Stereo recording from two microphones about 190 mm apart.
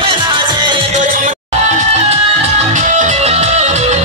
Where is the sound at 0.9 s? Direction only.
45° right (ahead or behind).